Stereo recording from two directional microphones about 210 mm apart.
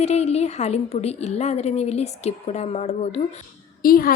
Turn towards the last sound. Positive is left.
turn(degrees=45)  # may be behind; listen again after turning